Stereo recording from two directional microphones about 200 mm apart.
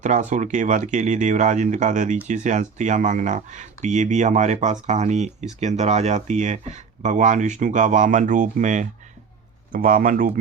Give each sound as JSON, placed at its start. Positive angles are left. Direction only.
{"t": 0.0, "sound": "speech", "side_deg": -40}